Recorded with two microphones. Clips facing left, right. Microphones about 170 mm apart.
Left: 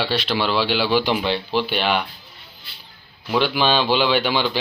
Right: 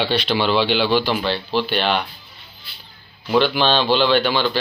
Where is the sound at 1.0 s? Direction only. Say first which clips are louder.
Even; 15° left (ahead or behind).